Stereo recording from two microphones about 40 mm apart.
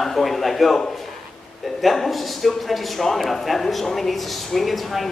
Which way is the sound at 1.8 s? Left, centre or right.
Centre.